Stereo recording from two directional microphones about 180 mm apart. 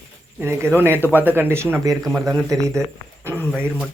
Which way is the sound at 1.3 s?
15° right (ahead or behind).